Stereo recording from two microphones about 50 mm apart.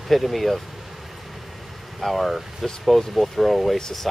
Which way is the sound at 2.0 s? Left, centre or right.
Centre.